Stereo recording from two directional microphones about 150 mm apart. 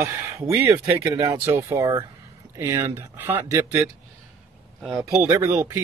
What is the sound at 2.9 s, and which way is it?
Speech, 15° right (ahead or behind).